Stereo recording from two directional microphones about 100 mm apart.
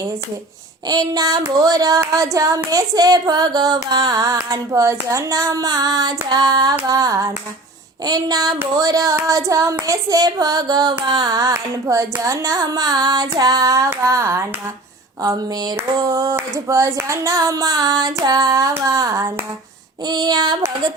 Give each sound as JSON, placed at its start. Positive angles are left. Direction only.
{"t": 0.9, "sound": "hands", "side_deg": -40}
{"t": 20.1, "sound": "child singing", "side_deg": -45}